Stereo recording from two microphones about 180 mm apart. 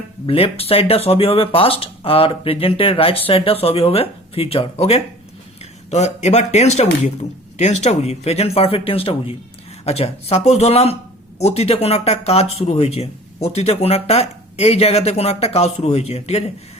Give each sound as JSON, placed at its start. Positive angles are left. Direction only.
{"t": 0.3, "sound": "speech", "side_deg": 30}